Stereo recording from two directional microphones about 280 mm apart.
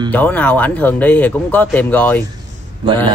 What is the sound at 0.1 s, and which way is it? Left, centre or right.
Speech, centre.